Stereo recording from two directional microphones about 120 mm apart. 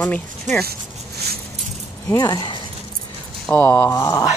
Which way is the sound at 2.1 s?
30° left (ahead or behind).